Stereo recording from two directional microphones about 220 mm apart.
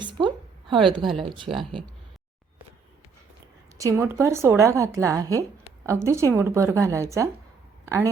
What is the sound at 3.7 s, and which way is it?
Speech, 15° right (ahead or behind).